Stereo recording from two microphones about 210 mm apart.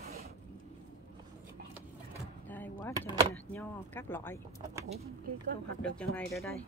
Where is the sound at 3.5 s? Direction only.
10° left (ahead or behind).